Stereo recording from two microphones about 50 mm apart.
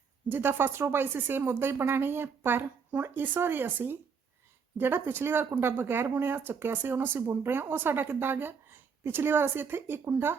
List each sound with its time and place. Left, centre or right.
0.3 s speech: right